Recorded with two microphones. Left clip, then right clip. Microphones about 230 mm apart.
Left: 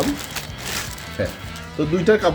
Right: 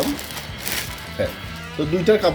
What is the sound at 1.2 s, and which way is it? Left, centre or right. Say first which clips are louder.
Speech: right 1 dB; centre.